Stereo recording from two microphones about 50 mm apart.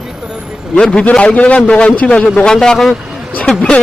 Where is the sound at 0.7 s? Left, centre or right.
Centre.